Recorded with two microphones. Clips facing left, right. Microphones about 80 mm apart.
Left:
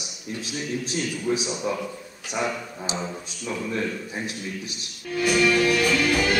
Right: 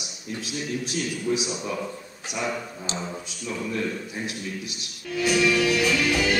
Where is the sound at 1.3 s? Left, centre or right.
Left.